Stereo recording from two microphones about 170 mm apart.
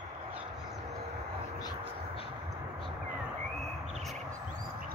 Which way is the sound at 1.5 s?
25° left (ahead or behind).